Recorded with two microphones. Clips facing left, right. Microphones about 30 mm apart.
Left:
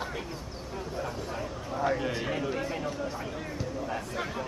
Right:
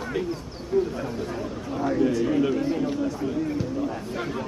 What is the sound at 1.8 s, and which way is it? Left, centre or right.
Speech, centre.